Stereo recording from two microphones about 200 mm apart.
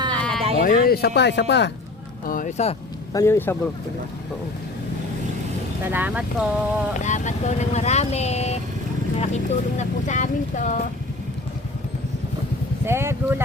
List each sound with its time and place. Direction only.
0.1 s sheep: 5° left (ahead or behind)
0.6 s speech: 45° left (ahead or behind)
2.2 s speech: 45° left (ahead or behind)
3.1 s a man's voice: 15° left (ahead or behind)
5.8 s speech: 10° right (ahead or behind)
7.0 s speech: 35° left (ahead or behind)
12.8 s speech: 10° right (ahead or behind)